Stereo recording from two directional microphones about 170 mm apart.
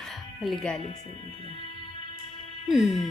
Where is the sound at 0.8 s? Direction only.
40° left (ahead or behind).